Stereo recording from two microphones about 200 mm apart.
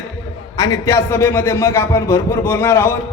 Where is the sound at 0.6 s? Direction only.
15° left (ahead or behind).